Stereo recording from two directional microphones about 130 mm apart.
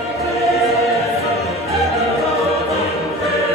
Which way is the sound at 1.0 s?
55° left (ahead or behind).